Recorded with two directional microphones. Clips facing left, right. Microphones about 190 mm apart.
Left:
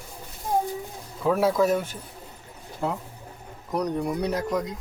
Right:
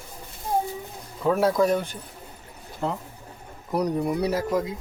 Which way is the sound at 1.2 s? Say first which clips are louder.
Right 1 dB; centre (ahead or behind).